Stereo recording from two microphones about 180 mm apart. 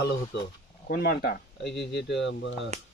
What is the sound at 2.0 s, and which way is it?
Speech, 80° left.